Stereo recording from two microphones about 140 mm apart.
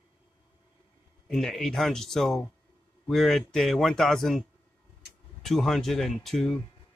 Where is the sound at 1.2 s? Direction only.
5° left (ahead or behind).